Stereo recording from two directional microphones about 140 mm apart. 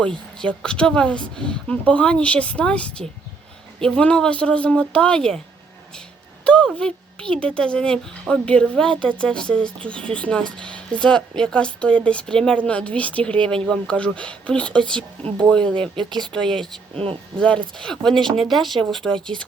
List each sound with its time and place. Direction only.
0.0 s speech: 5° left (ahead or behind)
6.4 s speech: 10° left (ahead or behind)
17.0 s speech: 40° right (ahead or behind)
17.7 s speech: 5° left (ahead or behind)